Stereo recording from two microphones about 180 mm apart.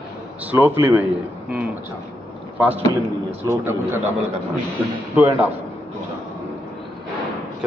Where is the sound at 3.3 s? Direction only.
15° right (ahead or behind).